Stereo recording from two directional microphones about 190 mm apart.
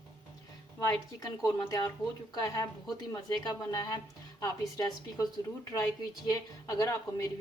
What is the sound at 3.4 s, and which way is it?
A woman's voice, 20° left (ahead or behind).